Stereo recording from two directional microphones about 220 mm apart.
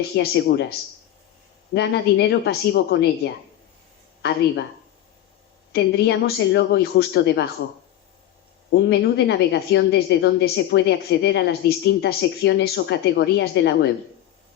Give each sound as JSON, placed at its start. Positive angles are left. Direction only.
{"t": 0.2, "sound": "a woman's voice", "side_deg": 50}
{"t": 4.2, "sound": "speech", "side_deg": 50}
{"t": 5.7, "sound": "a woman's voice", "side_deg": 50}
{"t": 8.7, "sound": "a woman's voice", "side_deg": 50}